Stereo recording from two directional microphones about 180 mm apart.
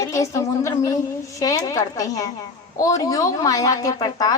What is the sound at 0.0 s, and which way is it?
A woman's voice, 15° left (ahead or behind).